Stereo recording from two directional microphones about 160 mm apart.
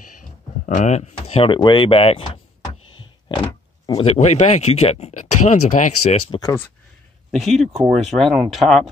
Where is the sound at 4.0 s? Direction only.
45° left (ahead or behind).